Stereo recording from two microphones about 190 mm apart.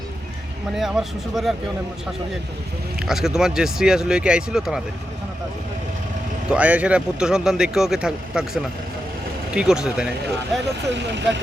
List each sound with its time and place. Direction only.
0.8 s speech: centre (ahead or behind)
3.1 s speech: centre (ahead or behind)
6.5 s speech: 5° right (ahead or behind)
10.9 s speech: 65° right (ahead or behind)